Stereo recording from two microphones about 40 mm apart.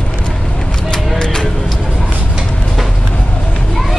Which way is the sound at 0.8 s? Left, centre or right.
Centre.